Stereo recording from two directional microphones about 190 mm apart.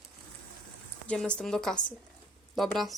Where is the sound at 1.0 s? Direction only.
5° left (ahead or behind).